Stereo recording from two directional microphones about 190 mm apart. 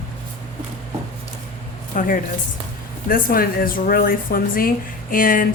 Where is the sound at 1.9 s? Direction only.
45° left (ahead or behind).